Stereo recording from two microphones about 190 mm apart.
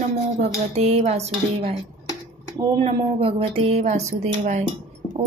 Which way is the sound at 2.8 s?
30° right (ahead or behind).